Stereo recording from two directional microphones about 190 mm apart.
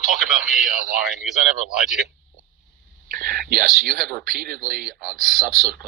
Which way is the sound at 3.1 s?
50° right (ahead or behind).